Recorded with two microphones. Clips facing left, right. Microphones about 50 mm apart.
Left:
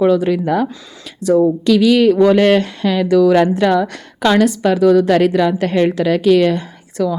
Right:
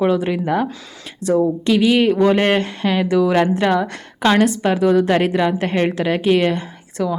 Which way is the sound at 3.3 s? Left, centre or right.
Right.